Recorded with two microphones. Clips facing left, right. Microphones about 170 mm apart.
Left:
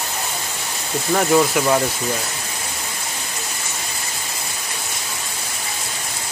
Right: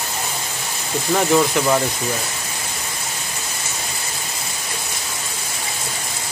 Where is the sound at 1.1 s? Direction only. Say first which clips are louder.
Even; 5° left (ahead or behind).